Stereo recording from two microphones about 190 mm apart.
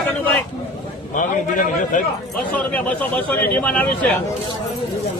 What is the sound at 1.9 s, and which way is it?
Speech, 45° left (ahead or behind).